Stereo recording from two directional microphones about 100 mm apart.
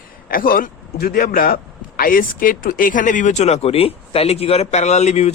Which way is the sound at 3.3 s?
90° left.